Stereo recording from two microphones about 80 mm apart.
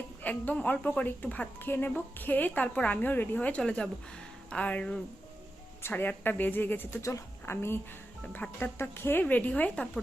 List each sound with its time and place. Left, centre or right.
0.2 s a woman's voice: left
7.0 s speech: left
7.5 s a woman's voice: left; by 10.0 s centre